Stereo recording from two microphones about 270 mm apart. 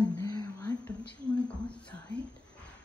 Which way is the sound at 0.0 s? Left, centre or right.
Centre.